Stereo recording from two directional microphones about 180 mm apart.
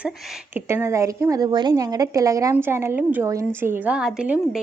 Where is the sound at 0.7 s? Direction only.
15° right (ahead or behind).